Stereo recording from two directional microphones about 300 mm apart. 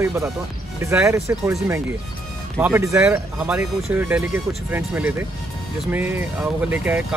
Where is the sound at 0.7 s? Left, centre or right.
Centre.